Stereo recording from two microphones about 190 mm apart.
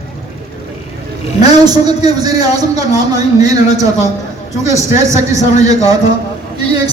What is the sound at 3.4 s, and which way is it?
Speech, 20° right (ahead or behind).